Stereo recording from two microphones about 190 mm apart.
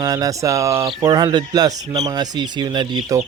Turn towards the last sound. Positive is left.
turn(degrees=-20)  # may be behind; listen again after turning